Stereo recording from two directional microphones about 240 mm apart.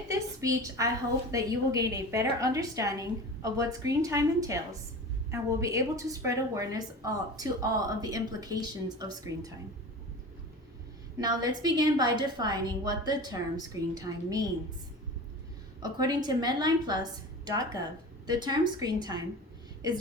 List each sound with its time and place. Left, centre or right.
0.1 s a sound: centre
1.3 s a woman's voice: centre
11.2 s a woman's voice: centre
15.8 s a woman's voice: centre